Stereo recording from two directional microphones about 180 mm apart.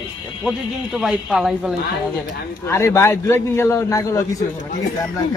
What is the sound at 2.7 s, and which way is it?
A man's voice, 15° left (ahead or behind).